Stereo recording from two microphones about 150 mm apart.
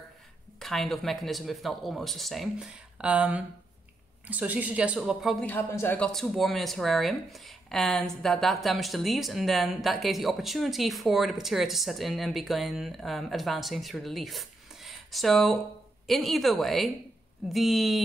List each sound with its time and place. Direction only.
0.6 s speech: centre (ahead or behind)
5.5 s a man's voice: 15° left (ahead or behind)
6.1 s speech: centre (ahead or behind)